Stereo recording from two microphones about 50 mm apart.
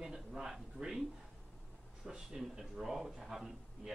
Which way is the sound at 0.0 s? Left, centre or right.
Centre.